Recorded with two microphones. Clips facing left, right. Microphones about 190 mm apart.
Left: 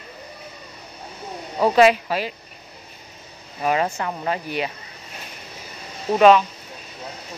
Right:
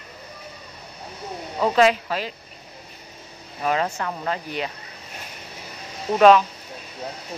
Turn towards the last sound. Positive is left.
turn(degrees=5)  # may be behind; listen again after turning